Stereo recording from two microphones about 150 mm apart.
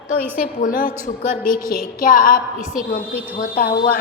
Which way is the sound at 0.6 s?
65° left (ahead or behind).